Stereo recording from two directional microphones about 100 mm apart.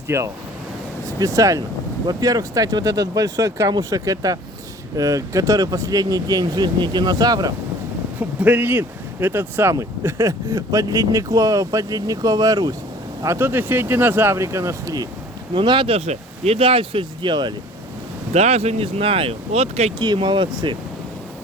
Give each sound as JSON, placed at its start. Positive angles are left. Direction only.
{"t": 0.1, "sound": "speech", "side_deg": -30}
{"t": 8.2, "sound": "speech", "side_deg": -15}
{"t": 13.2, "sound": "speech", "side_deg": -25}
{"t": 15.5, "sound": "speech", "side_deg": -55}
{"t": 18.3, "sound": "speech", "side_deg": -90}
{"t": 20.2, "sound": "speech", "side_deg": -50}